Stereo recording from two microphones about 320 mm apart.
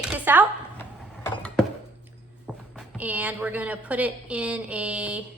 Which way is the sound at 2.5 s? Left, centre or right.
Centre.